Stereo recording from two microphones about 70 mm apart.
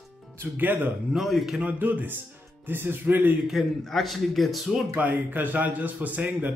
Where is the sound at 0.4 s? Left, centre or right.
Right.